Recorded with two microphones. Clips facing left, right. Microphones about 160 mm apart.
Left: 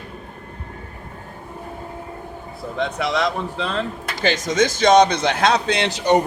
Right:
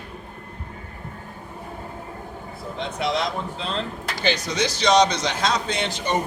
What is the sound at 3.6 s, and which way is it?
Speech, 65° left (ahead or behind).